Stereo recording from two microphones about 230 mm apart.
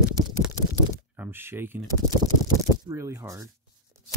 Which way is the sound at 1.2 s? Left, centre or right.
Centre.